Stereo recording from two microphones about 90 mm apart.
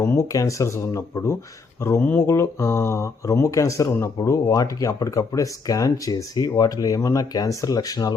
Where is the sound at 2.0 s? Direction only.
20° left (ahead or behind).